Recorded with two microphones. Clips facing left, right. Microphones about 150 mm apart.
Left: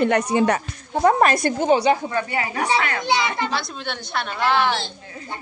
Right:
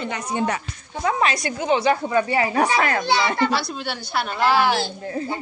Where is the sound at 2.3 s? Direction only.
30° right (ahead or behind).